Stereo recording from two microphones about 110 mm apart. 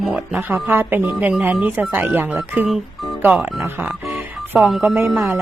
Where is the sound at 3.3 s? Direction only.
5° right (ahead or behind).